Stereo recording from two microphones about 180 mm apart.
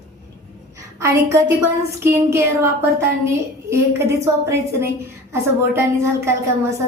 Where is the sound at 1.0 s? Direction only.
15° right (ahead or behind).